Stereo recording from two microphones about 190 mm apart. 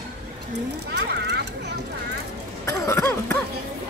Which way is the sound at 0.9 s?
60° right (ahead or behind).